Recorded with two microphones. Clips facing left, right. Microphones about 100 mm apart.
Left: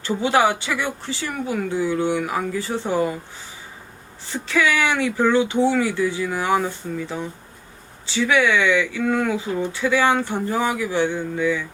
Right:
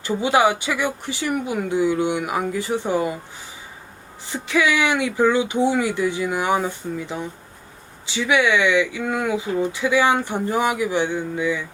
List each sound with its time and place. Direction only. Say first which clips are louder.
0.0 s speech: right 1 dB; 15° right (ahead or behind)
4.3 s speech: even; 15° right (ahead or behind)